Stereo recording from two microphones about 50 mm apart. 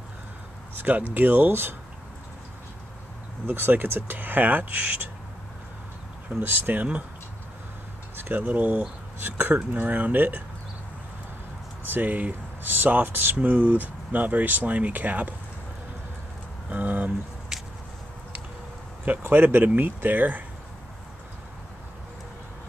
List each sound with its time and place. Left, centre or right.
0.7 s speech: right
3.4 s speech: right
6.4 s speech: right
8.2 s speech: right
11.9 s speech: right
13.4 s speech: right
16.6 s a sound: right
19.2 s speech: right